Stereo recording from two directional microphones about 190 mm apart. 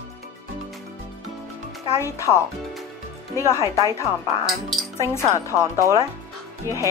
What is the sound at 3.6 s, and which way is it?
Speech, 15° right (ahead or behind).